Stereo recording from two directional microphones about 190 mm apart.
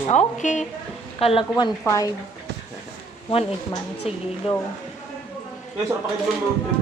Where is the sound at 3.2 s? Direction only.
25° left (ahead or behind).